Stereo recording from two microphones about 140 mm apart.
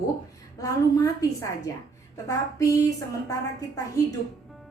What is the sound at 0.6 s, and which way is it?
A woman's voice, 25° left (ahead or behind).